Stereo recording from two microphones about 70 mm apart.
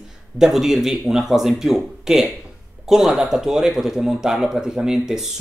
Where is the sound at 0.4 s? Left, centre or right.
Centre.